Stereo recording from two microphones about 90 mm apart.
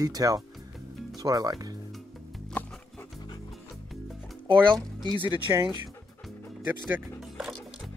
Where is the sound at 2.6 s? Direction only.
15° left (ahead or behind).